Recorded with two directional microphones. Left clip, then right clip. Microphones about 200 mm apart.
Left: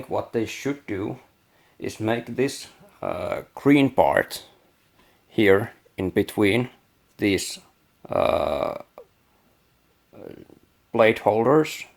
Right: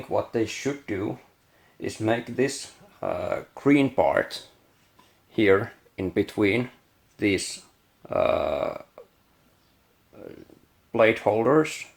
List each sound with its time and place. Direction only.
0.1 s speech: 35° left (ahead or behind)
8.0 s burping: 40° left (ahead or behind)
10.9 s speech: 40° left (ahead or behind)